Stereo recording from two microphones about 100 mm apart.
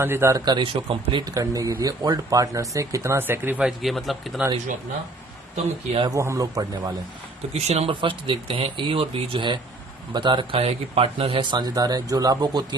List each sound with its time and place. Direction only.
0.0 s speech: 25° right (ahead or behind)
0.5 s speech: 60° right (ahead or behind)
1.2 s speech: 35° right (ahead or behind); by 3.6 s 20° right (ahead or behind)
3.6 s a man's voice: 5° right (ahead or behind)
4.4 s speech: 10° right (ahead or behind)
5.6 s speech: 90° right
6.1 s speech: 30° right (ahead or behind)
7.5 s speech: 90° right; by 10.6 s 50° right (ahead or behind)
10.6 s speech: 80° right
11.5 s speech: 40° right (ahead or behind)